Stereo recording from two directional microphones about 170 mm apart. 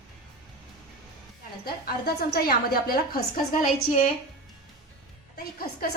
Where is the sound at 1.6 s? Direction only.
65° left (ahead or behind).